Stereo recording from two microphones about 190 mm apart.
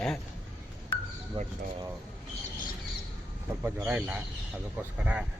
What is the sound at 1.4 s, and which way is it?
Speech, 25° right (ahead or behind).